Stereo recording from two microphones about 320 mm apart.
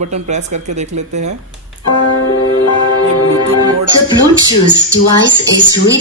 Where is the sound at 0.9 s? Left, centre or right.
Right.